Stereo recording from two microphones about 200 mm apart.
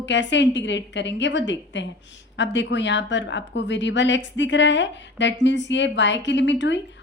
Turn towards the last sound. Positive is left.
turn(degrees=65)  # may be behind; listen again after turning